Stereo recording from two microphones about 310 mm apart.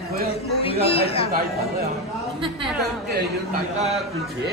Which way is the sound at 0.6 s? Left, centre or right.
Centre.